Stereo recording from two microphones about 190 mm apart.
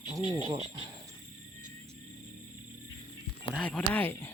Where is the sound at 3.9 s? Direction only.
10° left (ahead or behind).